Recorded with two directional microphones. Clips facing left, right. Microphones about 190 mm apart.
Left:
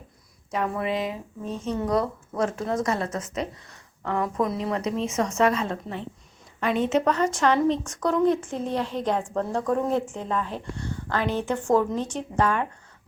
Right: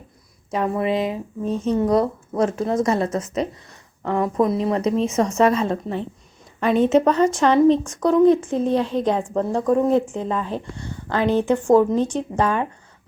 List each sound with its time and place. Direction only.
0.5 s a woman's voice: 25° right (ahead or behind)
7.0 s a woman's voice: 25° right (ahead or behind)